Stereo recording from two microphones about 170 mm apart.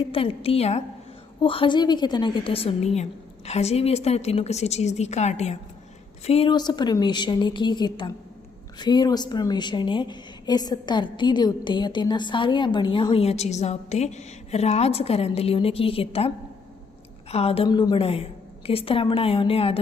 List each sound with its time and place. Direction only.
0.1 s a woman's voice: 35° left (ahead or behind)
17.3 s a woman's voice: 35° left (ahead or behind)